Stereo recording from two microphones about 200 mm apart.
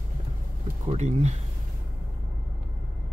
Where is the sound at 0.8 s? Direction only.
35° right (ahead or behind).